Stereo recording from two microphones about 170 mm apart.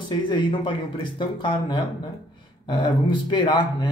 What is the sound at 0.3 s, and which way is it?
Speech, 30° left (ahead or behind).